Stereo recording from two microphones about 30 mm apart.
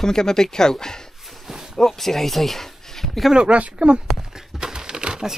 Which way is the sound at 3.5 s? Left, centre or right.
Right.